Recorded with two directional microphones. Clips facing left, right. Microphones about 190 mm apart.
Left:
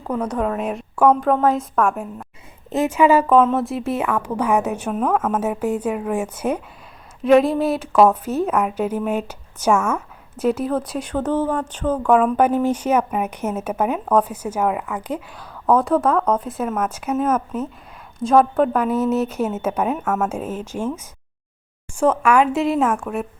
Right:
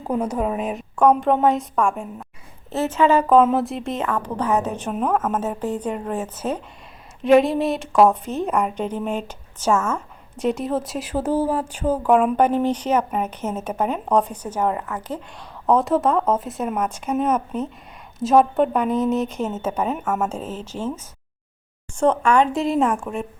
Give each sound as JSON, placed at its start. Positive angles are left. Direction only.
{"t": 0.0, "sound": "a woman's voice", "side_deg": -20}
{"t": 0.3, "sound": "a woman's voice", "side_deg": -10}
{"t": 2.6, "sound": "a woman's voice", "side_deg": 15}
{"t": 4.9, "sound": "a woman's voice", "side_deg": -5}
{"t": 5.3, "sound": "a woman's voice", "side_deg": 10}
{"t": 7.2, "sound": "speech", "side_deg": 0}
{"t": 12.4, "sound": "a woman's voice", "side_deg": 10}
{"t": 15.7, "sound": "a woman's voice", "side_deg": 0}
{"t": 20.0, "sound": "a woman's voice", "side_deg": -10}
{"t": 20.3, "sound": "a woman's voice", "side_deg": 10}